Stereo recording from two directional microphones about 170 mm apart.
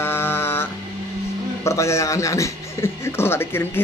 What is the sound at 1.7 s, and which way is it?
A man's voice, 15° left (ahead or behind).